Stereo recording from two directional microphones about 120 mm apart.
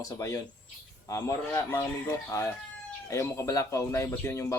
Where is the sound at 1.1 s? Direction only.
25° left (ahead or behind).